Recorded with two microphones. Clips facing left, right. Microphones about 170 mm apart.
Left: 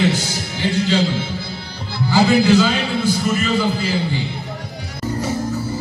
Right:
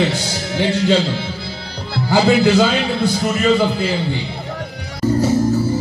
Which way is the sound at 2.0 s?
60° right (ahead or behind).